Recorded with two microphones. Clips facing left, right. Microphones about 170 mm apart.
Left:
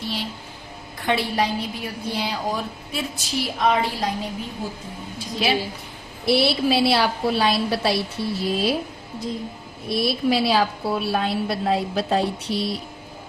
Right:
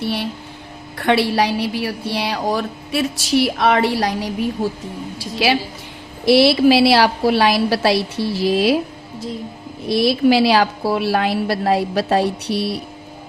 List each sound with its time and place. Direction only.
0.0 s a woman's voice: 65° right (ahead or behind); by 8.8 s 90° right
9.9 s a woman's voice: 90° right; by 12.8 s 65° right (ahead or behind)